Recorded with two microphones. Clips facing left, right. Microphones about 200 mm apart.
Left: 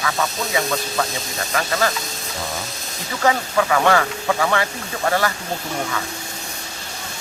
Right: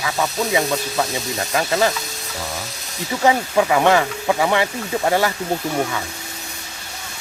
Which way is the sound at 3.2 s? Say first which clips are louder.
Right 2 dB; 20° right (ahead or behind).